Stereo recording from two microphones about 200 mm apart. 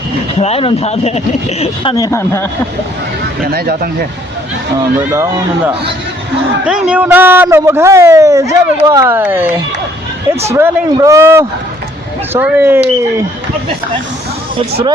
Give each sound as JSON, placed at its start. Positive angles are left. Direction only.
{"t": 0.3, "sound": "speech", "side_deg": 30}
{"t": 3.4, "sound": "speech", "side_deg": -50}
{"t": 5.1, "sound": "a man's voice", "side_deg": -15}